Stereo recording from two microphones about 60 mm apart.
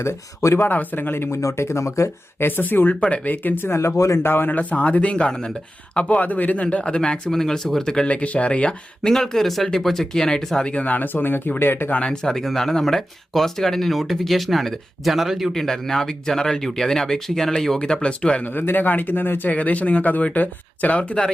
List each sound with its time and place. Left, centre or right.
0.0 s speech: left
0.7 s speech: left
1.4 s speech: left
2.4 s speech: left
2.9 s speech: left
3.7 s speech: left
3.9 s speech: left
4.2 s speech: left; by 9.1 s centre
9.1 s speech: centre; by 11.9 s left
11.9 s speech: centre
18.4 s speech: left
21.0 s speech: centre